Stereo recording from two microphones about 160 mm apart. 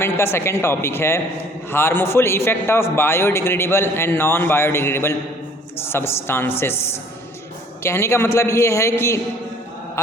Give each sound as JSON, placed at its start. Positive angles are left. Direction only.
{"t": 0.0, "sound": "a man's voice", "side_deg": 15}